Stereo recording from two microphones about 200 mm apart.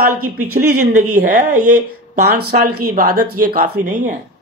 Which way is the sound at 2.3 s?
50° right (ahead or behind).